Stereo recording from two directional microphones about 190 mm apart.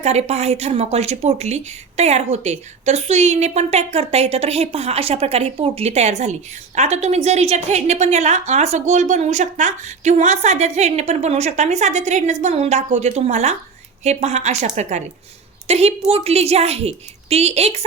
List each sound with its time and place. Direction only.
0.0 s a woman's voice: 35° right (ahead or behind)